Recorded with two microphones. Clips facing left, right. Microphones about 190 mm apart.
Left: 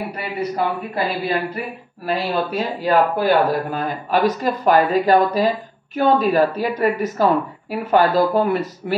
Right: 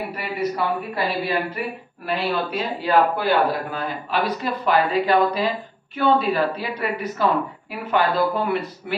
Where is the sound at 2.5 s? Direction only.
45° left (ahead or behind).